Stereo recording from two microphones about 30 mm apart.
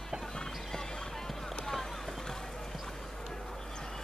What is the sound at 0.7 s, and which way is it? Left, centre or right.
Music, centre.